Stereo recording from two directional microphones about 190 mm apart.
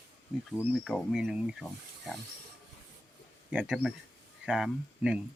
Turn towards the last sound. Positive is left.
turn(degrees=-5)  # may be behind; listen again after turning